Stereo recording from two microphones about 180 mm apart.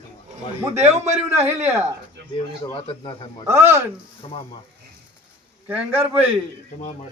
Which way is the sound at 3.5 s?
15° right (ahead or behind).